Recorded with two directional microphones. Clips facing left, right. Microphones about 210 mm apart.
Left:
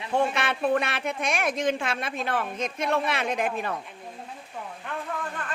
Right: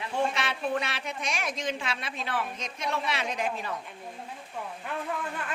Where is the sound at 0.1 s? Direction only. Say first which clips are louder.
Left 5 dB; 55° left (ahead or behind).